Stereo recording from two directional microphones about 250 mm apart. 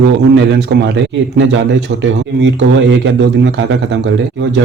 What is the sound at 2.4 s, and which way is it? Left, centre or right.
A man's voice, right.